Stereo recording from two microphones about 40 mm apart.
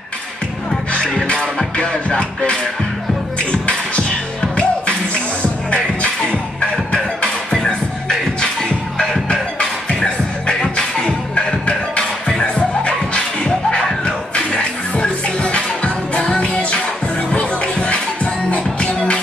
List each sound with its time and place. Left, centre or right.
2.0 s music: left
3.3 s beatboxing: left
4.6 s music: left
7.5 s music: centre; by 12.0 s left
12.0 s music: centre
12.4 s music: left